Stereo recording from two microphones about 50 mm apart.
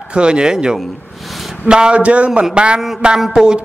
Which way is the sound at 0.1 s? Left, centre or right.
Centre.